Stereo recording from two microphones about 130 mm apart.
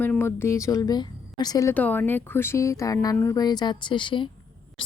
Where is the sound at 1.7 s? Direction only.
10° left (ahead or behind).